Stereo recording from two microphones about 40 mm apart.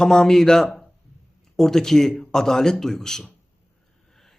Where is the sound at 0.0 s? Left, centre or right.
Centre.